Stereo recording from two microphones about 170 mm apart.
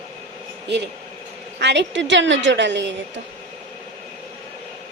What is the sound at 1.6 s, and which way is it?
A woman's voice, 85° right.